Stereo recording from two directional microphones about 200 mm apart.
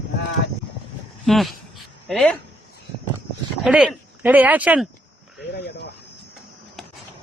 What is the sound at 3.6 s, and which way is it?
Speech, 5° right (ahead or behind).